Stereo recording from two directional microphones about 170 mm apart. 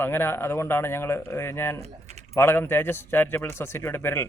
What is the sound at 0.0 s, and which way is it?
Speech, 15° left (ahead or behind).